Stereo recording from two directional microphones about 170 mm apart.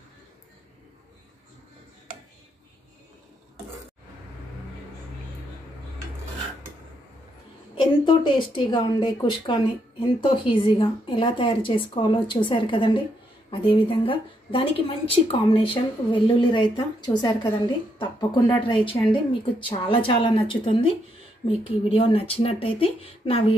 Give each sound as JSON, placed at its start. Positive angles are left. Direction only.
{"t": 7.7, "sound": "a woman's voice", "side_deg": 30}